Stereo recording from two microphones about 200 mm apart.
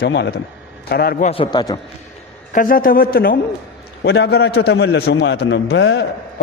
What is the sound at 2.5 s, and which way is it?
Speech, 45° left (ahead or behind).